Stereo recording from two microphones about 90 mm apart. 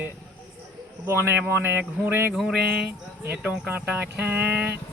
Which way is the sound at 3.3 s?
15° right (ahead or behind).